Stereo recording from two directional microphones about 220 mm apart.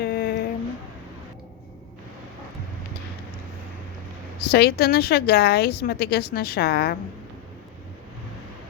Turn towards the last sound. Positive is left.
turn(degrees=45)  # may be behind; listen again after turning